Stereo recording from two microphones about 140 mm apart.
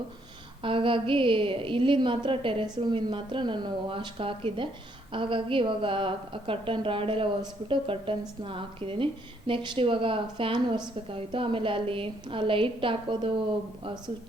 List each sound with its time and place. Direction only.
0.6 s a woman's voice: 40° right (ahead or behind)